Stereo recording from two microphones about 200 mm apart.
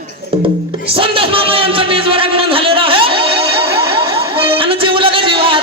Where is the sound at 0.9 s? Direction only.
25° right (ahead or behind).